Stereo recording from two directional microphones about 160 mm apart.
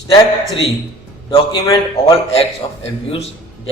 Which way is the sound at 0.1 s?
30° left (ahead or behind).